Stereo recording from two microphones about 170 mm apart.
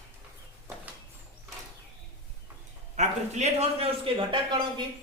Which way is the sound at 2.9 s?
45° right (ahead or behind).